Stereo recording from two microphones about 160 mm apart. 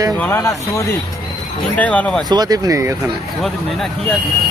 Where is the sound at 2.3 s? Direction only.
25° right (ahead or behind).